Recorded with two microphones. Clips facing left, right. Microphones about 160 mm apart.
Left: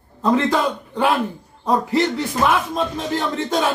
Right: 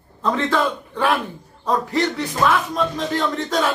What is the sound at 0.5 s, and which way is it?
A man's voice, 15° left (ahead or behind).